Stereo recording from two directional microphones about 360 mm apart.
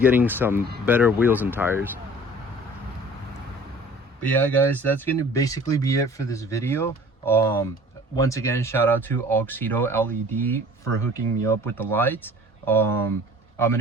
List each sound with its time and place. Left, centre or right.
0.0 s speech: centre
4.2 s speech: centre